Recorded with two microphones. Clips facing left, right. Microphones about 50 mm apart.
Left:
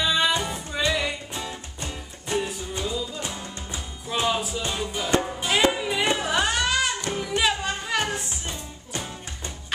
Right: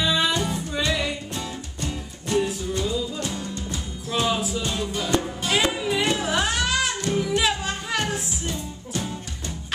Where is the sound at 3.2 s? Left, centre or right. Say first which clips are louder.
Right 4 dB; centre.